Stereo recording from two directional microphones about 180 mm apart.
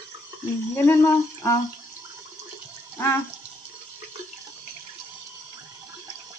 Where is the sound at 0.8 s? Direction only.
15° left (ahead or behind).